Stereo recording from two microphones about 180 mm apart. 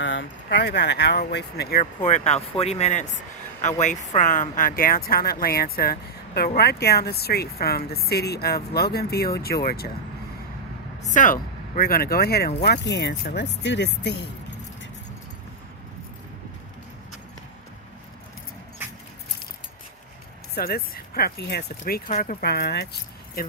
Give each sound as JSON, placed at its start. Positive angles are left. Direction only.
{"t": 0.0, "sound": "speech", "side_deg": 90}
{"t": 1.8, "sound": "speech", "side_deg": 45}
{"t": 11.0, "sound": "speech", "side_deg": 45}
{"t": 12.6, "sound": "speech", "side_deg": 70}
{"t": 20.6, "sound": "speech", "side_deg": 60}